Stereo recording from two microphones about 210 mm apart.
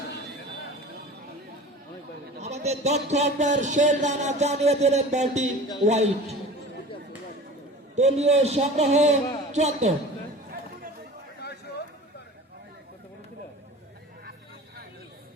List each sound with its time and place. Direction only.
2.4 s speech: 30° right (ahead or behind)
7.9 s speech: 30° right (ahead or behind)
11.4 s a sound: 50° left (ahead or behind)